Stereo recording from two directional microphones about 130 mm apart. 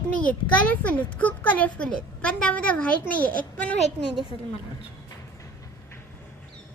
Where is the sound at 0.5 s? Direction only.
10° left (ahead or behind).